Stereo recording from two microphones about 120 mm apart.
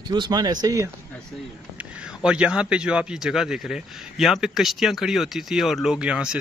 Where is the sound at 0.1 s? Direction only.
35° right (ahead or behind).